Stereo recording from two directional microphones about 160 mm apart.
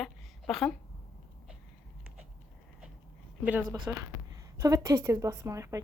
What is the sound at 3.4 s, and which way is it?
A woman's voice, 10° right (ahead or behind).